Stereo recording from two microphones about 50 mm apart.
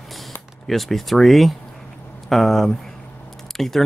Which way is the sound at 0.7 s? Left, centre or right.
Centre.